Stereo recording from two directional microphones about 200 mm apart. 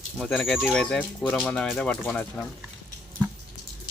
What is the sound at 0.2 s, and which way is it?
Speech, centre (ahead or behind).